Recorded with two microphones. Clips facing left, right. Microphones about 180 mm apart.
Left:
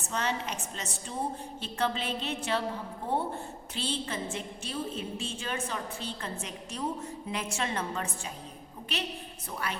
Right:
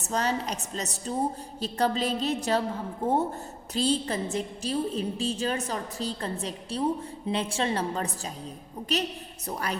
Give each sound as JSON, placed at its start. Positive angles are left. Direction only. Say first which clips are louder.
{"t": 0.0, "sound": "a woman's voice", "louder": "right 4 dB", "side_deg": -40}